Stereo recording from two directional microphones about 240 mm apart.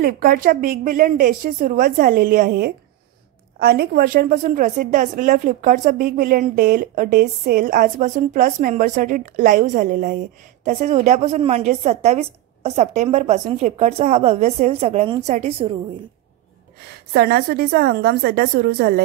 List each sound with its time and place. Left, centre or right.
0.0 s a woman's voice: right
17.1 s a woman's voice: right